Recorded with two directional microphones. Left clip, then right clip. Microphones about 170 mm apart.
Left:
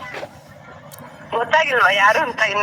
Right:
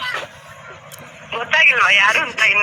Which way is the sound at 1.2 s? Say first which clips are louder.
Right 3 dB; 25° left (ahead or behind).